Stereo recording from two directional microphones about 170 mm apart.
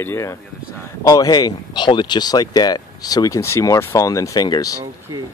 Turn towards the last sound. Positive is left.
turn(degrees=20)  # may be behind; listen again after turning